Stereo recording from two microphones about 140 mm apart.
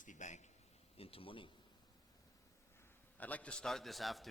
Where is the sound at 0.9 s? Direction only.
40° left (ahead or behind).